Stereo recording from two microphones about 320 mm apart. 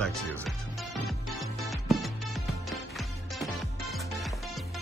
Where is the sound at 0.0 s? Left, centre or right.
Centre.